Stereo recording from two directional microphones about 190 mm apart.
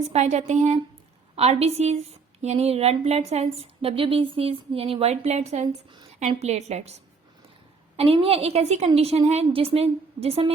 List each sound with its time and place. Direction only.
0.1 s speech: 35° right (ahead or behind)
7.9 s speech: 30° right (ahead or behind)